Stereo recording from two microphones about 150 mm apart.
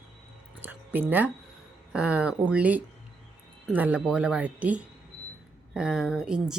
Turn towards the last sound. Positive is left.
turn(degrees=-5)  # may be behind; listen again after turning